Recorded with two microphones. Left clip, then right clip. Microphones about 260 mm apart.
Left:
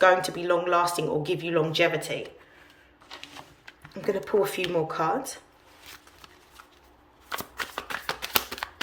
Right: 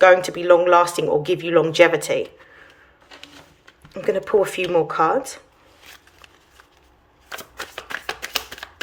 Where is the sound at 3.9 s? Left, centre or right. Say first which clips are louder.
Right 7 dB; centre.